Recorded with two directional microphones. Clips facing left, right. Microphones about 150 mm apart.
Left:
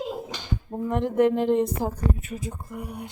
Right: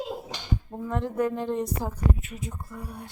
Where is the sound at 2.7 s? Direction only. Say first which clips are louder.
Left 4 dB; 15° left (ahead or behind).